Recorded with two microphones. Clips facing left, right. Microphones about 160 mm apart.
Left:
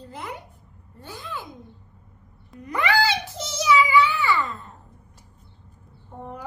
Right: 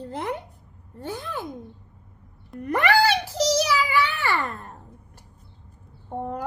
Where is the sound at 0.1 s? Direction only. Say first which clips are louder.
Right 6 dB; 60° right (ahead or behind).